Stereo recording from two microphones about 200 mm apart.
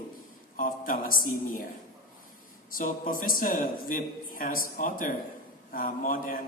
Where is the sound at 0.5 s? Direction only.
40° left (ahead or behind).